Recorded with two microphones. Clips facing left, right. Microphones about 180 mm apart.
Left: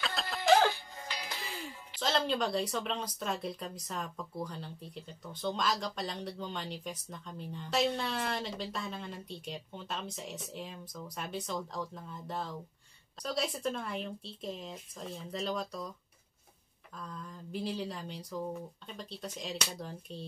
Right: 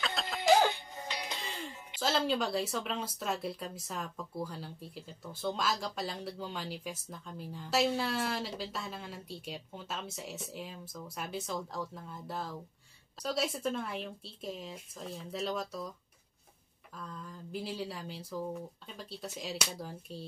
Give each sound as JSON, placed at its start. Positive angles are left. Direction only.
{"t": 0.0, "sound": "music", "side_deg": 0}
{"t": 0.4, "sound": "music", "side_deg": -20}
{"t": 1.4, "sound": "music", "side_deg": 10}
{"t": 2.0, "sound": "speech", "side_deg": -5}
{"t": 16.9, "sound": "speech", "side_deg": 0}